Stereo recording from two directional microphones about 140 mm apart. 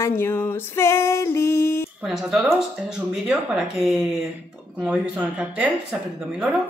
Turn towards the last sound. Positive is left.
turn(degrees=-5)  # may be behind; listen again after turning